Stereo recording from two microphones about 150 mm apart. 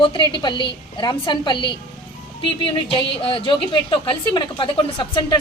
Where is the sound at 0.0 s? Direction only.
35° left (ahead or behind).